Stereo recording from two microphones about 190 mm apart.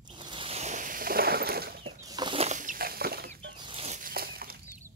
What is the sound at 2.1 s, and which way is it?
Chicken, 25° right (ahead or behind).